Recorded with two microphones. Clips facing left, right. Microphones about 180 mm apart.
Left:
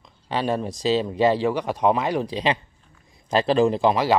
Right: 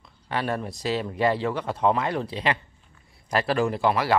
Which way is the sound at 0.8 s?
20° left (ahead or behind).